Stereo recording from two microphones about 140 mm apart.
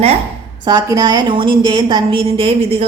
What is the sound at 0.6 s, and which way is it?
A woman's voice, 25° right (ahead or behind).